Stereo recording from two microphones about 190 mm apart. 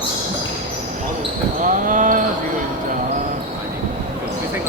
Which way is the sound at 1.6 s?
45° right (ahead or behind).